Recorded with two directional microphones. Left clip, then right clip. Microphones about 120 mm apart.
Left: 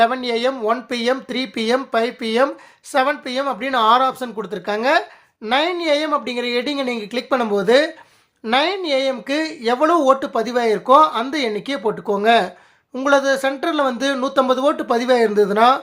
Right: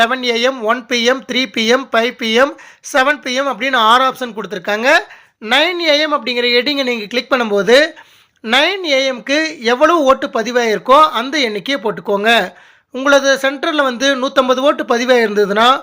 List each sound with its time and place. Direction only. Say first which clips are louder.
0.0 s speech: right 4 dB; 20° right (ahead or behind)